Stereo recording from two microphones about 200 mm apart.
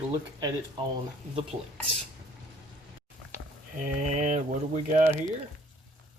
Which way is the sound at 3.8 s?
40° right (ahead or behind).